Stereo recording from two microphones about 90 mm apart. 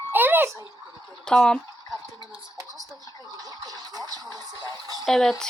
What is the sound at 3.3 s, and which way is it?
Speech, 45° right (ahead or behind).